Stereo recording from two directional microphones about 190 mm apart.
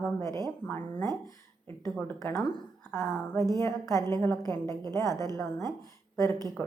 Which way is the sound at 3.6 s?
15° left (ahead or behind).